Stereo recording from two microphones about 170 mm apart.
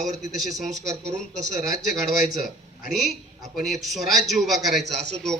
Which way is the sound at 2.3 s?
55° left (ahead or behind).